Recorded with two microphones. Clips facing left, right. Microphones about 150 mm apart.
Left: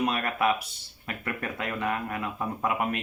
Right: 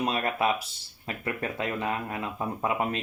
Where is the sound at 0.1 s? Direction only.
25° right (ahead or behind).